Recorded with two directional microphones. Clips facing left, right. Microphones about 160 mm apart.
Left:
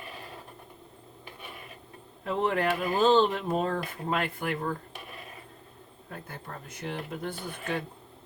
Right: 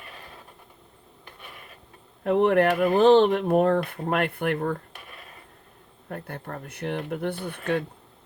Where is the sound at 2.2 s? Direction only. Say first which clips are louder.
Right 8 dB; 60° right (ahead or behind).